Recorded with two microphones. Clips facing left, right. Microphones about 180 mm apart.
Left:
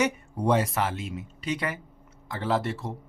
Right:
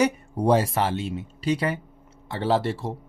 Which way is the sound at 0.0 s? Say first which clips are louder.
Right 4 dB; 35° right (ahead or behind).